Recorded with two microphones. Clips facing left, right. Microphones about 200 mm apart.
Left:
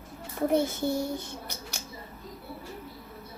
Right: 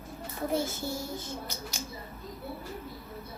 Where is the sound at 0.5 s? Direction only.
60° left (ahead or behind).